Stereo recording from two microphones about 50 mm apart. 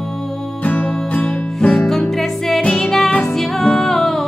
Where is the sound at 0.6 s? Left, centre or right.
Left.